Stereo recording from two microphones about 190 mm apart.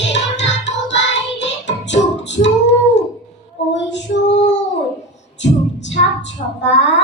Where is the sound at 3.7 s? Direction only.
70° left (ahead or behind).